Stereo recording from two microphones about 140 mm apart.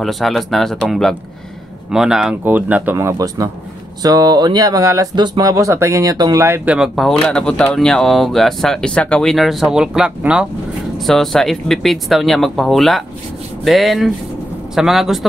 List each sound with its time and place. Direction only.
0.0 s speech: centre (ahead or behind); by 6.4 s 25° right (ahead or behind)
6.4 s speech: 15° right (ahead or behind)